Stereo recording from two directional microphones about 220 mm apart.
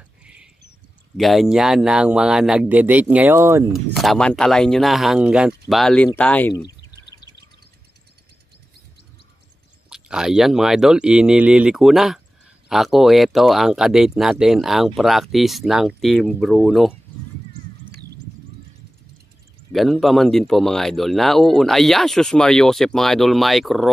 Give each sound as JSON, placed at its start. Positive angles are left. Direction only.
{"t": 0.2, "sound": "a sound", "side_deg": -5}
{"t": 1.1, "sound": "a man's voice", "side_deg": 0}
{"t": 3.7, "sound": "a man's voice", "side_deg": 0}
{"t": 9.8, "sound": "a man's voice", "side_deg": -5}
{"t": 19.7, "sound": "a man's voice", "side_deg": 0}